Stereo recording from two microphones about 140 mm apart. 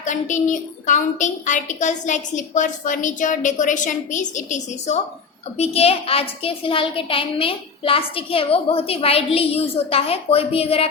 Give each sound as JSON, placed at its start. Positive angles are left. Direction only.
{"t": 0.0, "sound": "a woman's voice", "side_deg": 60}
{"t": 5.5, "sound": "a child's voice", "side_deg": 45}